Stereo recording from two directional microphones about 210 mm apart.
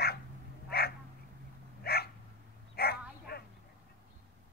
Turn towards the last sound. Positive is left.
turn(degrees=50)  # may be behind; listen again after turning